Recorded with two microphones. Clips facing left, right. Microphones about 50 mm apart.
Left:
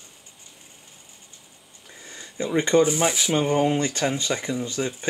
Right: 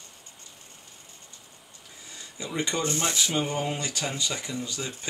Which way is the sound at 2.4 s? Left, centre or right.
Left.